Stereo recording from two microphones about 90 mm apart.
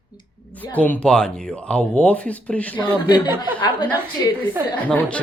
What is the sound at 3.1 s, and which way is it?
Speech, 55° left (ahead or behind).